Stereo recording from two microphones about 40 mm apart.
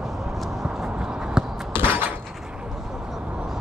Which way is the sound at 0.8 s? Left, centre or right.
Centre.